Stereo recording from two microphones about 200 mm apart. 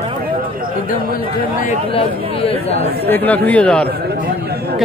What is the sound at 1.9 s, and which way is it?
Speech, 30° left (ahead or behind).